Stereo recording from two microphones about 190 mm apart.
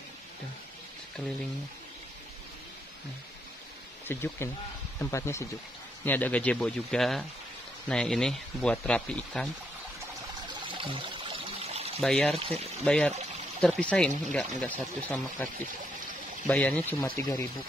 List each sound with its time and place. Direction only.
4.1 s speech: 10° left (ahead or behind)
10.7 s pour: 25° right (ahead or behind)
12.0 s speech: 5° left (ahead or behind)
12.4 s speech: 30° right (ahead or behind)
12.8 s speech: 5° left (ahead or behind)